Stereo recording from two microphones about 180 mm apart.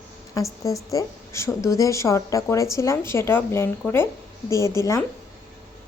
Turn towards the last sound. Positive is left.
turn(degrees=15)  # may be behind; listen again after turning